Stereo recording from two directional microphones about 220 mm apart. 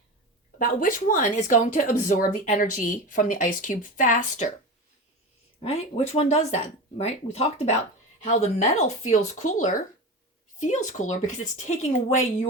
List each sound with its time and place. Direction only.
0.6 s speech: 40° left (ahead or behind)
5.5 s speech: 30° left (ahead or behind)